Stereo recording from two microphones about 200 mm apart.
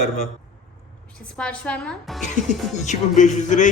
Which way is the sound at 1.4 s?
5° left (ahead or behind).